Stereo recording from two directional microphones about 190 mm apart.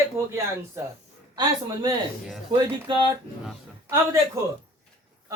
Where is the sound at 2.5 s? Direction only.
25° right (ahead or behind).